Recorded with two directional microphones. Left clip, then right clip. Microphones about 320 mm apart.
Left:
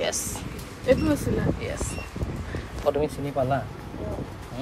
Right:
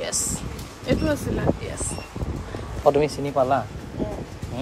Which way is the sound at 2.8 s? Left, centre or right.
Right.